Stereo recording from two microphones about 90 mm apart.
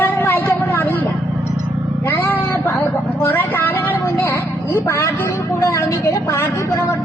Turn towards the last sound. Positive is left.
turn(degrees=35)  # may be behind; listen again after turning